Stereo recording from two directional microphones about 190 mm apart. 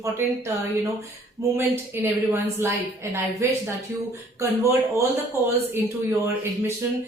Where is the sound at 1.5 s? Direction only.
10° right (ahead or behind).